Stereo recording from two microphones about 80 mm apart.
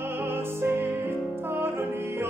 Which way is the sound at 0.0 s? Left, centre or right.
Right.